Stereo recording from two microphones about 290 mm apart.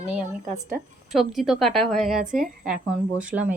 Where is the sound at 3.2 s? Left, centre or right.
Centre.